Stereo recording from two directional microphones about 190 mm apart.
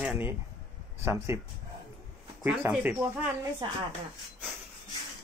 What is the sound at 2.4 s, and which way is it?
Speech, 10° right (ahead or behind).